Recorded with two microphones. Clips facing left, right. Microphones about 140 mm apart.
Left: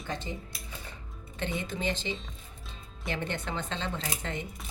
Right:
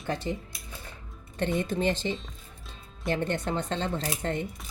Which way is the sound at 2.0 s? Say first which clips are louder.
Right 4 dB; 45° right (ahead or behind).